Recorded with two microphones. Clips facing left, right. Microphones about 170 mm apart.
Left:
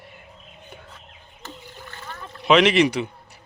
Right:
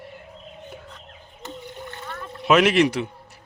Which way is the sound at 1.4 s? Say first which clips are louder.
Right 5 dB; 20° right (ahead or behind).